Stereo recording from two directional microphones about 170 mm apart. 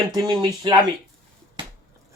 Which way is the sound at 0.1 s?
25° right (ahead or behind).